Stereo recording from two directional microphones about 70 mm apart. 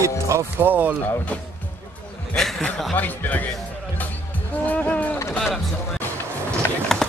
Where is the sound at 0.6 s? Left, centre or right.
Right.